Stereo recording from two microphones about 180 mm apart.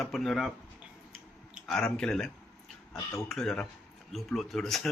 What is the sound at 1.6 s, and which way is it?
Speech, 5° left (ahead or behind).